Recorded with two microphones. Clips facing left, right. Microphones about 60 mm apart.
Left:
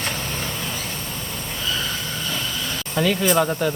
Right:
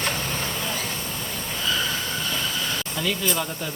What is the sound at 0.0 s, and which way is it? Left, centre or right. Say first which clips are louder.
Vehicle: even; centre.